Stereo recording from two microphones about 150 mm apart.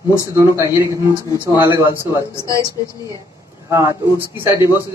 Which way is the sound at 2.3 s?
20° left (ahead or behind).